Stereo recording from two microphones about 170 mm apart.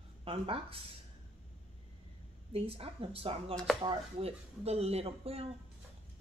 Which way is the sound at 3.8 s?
35° right (ahead or behind).